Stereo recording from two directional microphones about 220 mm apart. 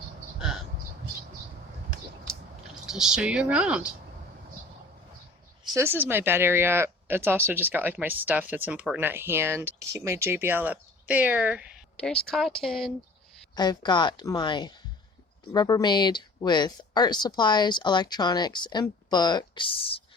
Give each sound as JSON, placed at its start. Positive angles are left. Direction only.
{"t": 2.8, "sound": "speech", "side_deg": 0}
{"t": 5.6, "sound": "speech", "side_deg": -15}
{"t": 11.9, "sound": "speech", "side_deg": 5}
{"t": 13.6, "sound": "speech", "side_deg": 20}